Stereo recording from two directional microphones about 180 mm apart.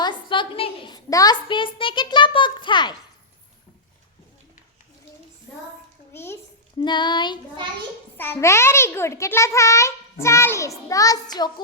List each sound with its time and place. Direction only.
0.0 s a child's voice: 25° left (ahead or behind)
6.1 s a child's voice: 15° left (ahead or behind)
6.7 s a child's voice: 25° left (ahead or behind)
8.2 s a child's voice: 15° left (ahead or behind)